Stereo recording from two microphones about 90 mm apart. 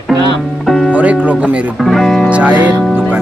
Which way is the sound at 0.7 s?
Centre (ahead or behind).